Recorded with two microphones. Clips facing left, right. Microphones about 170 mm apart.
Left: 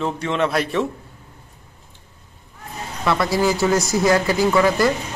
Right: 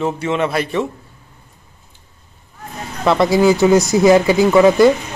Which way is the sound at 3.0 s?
20° right (ahead or behind).